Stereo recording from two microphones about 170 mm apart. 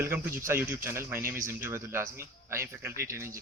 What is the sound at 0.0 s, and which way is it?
Speech, 15° right (ahead or behind).